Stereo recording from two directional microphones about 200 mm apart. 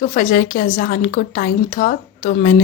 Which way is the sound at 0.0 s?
45° left (ahead or behind).